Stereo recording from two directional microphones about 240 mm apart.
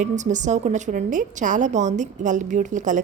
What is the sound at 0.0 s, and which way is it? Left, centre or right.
A woman's voice, right.